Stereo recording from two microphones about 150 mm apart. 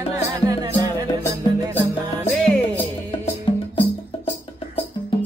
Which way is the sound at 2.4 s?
5° left (ahead or behind).